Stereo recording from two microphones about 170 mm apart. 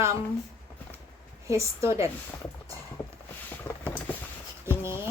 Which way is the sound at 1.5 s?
15° right (ahead or behind).